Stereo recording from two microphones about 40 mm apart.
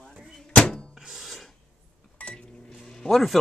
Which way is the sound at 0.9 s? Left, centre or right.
Centre.